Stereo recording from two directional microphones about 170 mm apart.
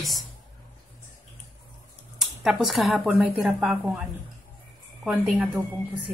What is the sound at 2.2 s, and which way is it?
A woman's voice, centre (ahead or behind).